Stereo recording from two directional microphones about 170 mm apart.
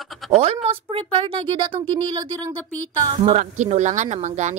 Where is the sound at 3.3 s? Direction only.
45° right (ahead or behind).